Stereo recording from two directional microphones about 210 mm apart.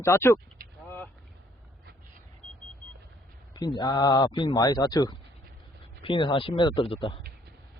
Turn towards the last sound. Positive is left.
turn(degrees=25)  # may be behind; listen again after turning